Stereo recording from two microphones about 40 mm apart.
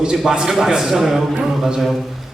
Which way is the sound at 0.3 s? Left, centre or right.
Centre.